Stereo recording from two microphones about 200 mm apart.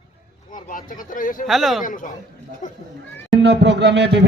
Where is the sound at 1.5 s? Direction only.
Centre (ahead or behind).